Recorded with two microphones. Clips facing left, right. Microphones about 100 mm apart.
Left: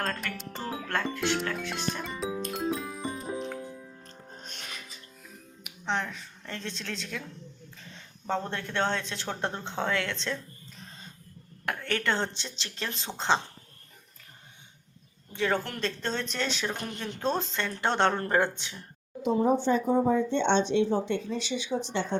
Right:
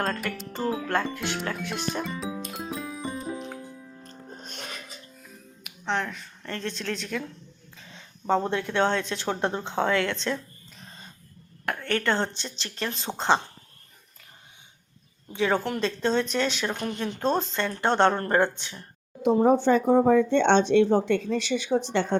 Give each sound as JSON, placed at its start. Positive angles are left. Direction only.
{"t": 0.0, "sound": "speech", "side_deg": -5}
{"t": 2.4, "sound": "music", "side_deg": -5}
{"t": 5.6, "sound": "a woman's voice", "side_deg": 5}
{"t": 7.8, "sound": "a sound", "side_deg": -5}
{"t": 8.4, "sound": "speech", "side_deg": -10}
{"t": 11.8, "sound": "speech", "side_deg": 0}
{"t": 15.3, "sound": "speech", "side_deg": -10}
{"t": 19.2, "sound": "speech", "side_deg": -60}